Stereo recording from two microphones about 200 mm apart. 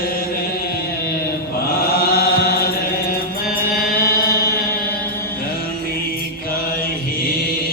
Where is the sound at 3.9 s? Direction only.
50° left (ahead or behind).